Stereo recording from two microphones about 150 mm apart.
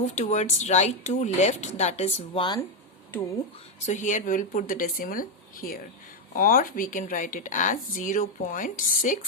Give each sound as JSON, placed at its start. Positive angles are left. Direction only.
{"t": 0.0, "sound": "speech", "side_deg": 50}
{"t": 3.8, "sound": "a woman's voice", "side_deg": 55}